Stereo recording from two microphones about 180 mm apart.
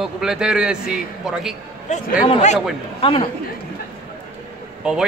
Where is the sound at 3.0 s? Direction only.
30° left (ahead or behind).